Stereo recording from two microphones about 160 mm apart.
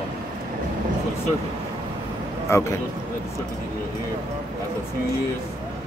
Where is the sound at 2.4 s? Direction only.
15° left (ahead or behind).